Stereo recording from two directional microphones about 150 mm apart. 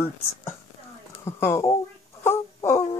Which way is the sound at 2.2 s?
15° left (ahead or behind).